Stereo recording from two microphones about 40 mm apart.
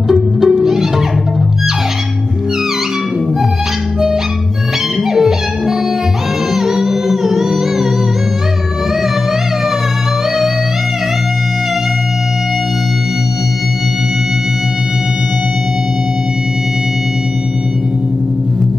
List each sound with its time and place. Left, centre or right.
0.1 s music: centre
5.1 s music: centre